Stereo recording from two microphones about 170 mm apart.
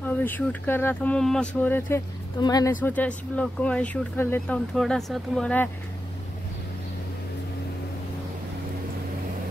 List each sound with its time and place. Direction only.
0.0 s speech: 10° left (ahead or behind)
2.4 s speech: 20° left (ahead or behind)
2.8 s speech: 10° left (ahead or behind)